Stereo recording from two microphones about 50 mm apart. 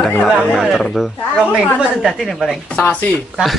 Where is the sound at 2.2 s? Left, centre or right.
Centre.